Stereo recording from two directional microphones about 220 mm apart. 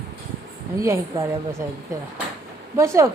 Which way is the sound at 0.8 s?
15° right (ahead or behind).